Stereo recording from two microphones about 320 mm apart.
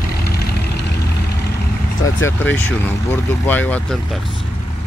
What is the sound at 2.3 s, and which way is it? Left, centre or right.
Speech, centre.